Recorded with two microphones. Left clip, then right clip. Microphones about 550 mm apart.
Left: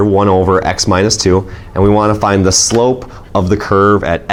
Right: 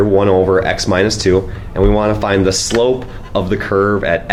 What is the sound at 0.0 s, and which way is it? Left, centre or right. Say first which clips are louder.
Speech: left 1 dB; left.